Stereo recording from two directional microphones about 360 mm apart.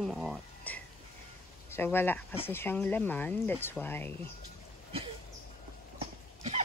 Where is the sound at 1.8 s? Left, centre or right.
Centre.